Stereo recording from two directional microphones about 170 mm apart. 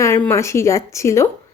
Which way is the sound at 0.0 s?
15° left (ahead or behind).